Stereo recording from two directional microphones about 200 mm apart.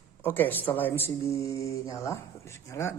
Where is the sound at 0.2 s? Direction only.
10° left (ahead or behind).